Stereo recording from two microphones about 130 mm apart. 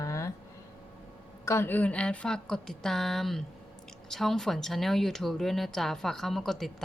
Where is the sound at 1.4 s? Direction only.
20° left (ahead or behind).